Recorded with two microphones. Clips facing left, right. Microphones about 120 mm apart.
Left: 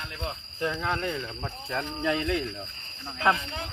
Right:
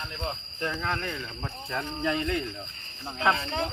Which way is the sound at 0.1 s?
Centre (ahead or behind).